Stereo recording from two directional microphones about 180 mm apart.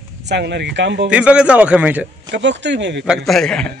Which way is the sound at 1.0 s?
5° right (ahead or behind).